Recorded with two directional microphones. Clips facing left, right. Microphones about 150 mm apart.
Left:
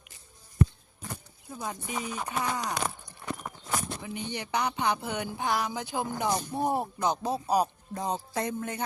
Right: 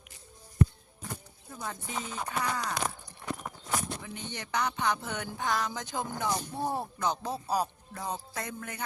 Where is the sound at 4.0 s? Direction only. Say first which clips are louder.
Left 5 dB; 15° left (ahead or behind).